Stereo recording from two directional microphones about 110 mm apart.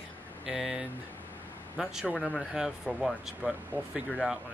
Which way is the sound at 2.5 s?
10° right (ahead or behind).